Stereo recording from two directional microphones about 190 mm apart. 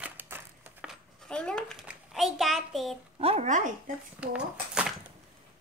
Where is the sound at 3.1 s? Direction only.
30° right (ahead or behind).